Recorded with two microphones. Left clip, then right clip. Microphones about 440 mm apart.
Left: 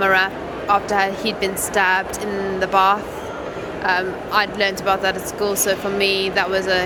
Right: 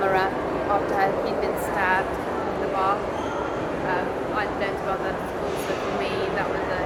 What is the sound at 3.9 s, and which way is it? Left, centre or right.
Speech, left.